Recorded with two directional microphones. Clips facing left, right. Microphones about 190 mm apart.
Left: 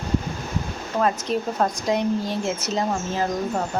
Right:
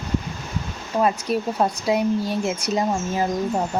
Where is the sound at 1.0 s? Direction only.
10° right (ahead or behind).